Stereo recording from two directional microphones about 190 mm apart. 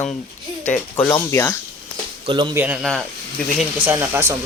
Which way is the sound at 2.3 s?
25° right (ahead or behind).